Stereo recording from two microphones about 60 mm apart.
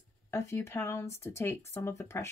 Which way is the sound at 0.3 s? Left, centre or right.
Left.